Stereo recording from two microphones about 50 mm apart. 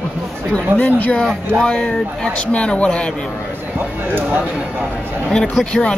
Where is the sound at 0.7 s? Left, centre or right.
Left.